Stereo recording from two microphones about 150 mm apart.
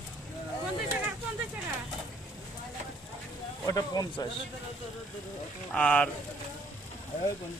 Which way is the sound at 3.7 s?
25° left (ahead or behind).